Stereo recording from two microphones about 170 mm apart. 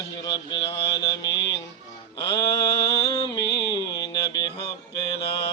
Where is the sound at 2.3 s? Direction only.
20° left (ahead or behind).